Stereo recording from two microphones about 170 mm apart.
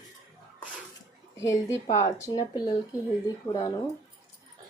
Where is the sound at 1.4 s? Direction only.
15° left (ahead or behind).